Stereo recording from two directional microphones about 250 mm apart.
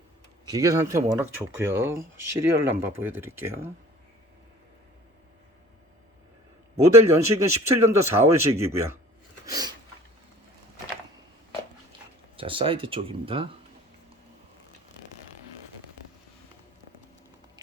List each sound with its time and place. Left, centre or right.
0.4 s speech: centre
6.9 s speech: centre
9.5 s a sound: centre
12.4 s speech: right